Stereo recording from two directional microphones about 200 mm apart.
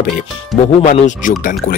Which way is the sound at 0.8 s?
35° left (ahead or behind).